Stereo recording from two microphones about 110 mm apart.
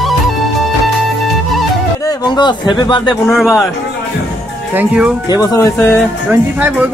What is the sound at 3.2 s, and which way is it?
Speech, centre (ahead or behind).